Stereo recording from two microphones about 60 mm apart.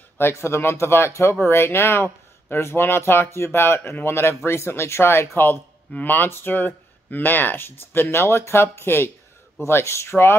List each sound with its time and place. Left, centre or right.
0.2 s speech: left